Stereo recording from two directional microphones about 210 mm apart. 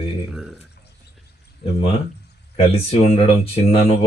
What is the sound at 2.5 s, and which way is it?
Speech, 30° left (ahead or behind).